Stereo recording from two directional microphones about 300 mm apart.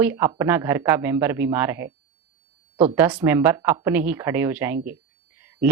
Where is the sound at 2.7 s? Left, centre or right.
Centre.